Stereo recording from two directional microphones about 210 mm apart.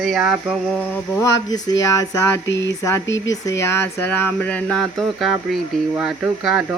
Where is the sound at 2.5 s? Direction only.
55° left (ahead or behind).